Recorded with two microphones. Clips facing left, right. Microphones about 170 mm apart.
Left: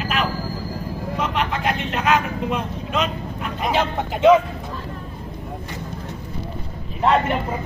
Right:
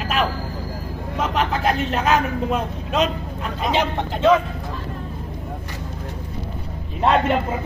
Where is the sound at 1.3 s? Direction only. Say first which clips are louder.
Right 5 dB; 40° right (ahead or behind).